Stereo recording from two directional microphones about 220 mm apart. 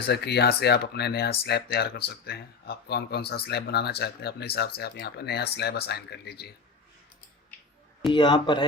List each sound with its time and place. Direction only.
0.1 s speech: 50° left (ahead or behind)
8.1 s speech: 20° left (ahead or behind)